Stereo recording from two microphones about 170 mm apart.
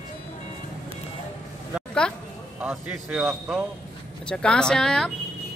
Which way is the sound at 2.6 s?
5° right (ahead or behind).